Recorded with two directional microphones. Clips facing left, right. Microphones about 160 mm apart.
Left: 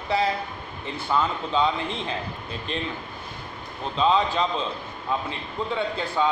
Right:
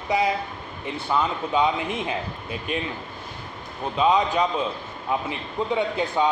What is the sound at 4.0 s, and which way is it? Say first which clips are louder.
A man's voice: right 1 dB; 15° right (ahead or behind).